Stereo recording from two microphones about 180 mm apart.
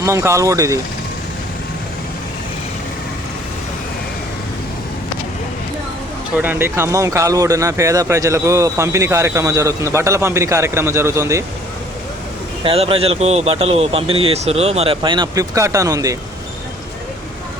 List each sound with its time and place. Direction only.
0.0 s speech: 15° right (ahead or behind)
6.3 s speech: 10° right (ahead or behind)
12.6 s speech: 30° right (ahead or behind)